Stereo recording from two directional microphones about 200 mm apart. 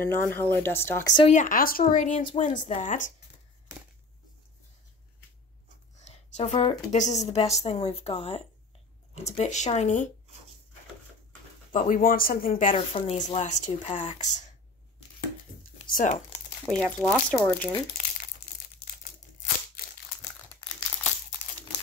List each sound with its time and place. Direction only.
0.0 s speech: 10° left (ahead or behind)
1.3 s a woman's voice: 40° left (ahead or behind)
5.9 s a woman's voice: 35° left (ahead or behind)
11.7 s speech: 45° left (ahead or behind)
12.7 s a woman's voice: 30° left (ahead or behind)
15.9 s speech: 40° left (ahead or behind)
16.6 s speech: 5° right (ahead or behind)
17.3 s speech: 5° left (ahead or behind)